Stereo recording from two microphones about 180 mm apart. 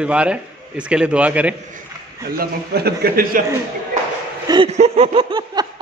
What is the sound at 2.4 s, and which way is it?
A man's voice, 60° right (ahead or behind).